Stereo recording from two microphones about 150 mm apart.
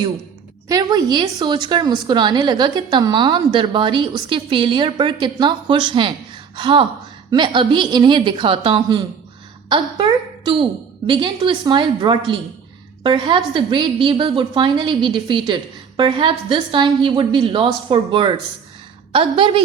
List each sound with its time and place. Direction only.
0.7 s a woman's voice: 25° right (ahead or behind)